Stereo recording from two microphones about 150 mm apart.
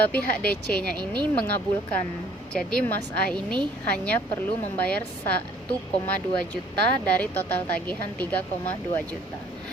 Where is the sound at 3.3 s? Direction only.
30° right (ahead or behind).